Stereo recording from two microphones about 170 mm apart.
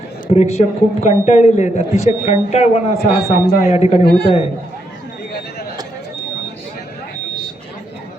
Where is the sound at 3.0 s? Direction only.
65° left (ahead or behind).